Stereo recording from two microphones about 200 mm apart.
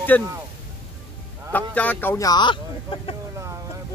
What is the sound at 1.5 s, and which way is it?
A man's voice, 10° left (ahead or behind).